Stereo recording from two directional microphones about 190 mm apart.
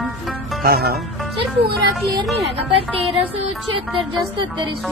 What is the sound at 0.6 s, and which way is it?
Speech, 55° right (ahead or behind).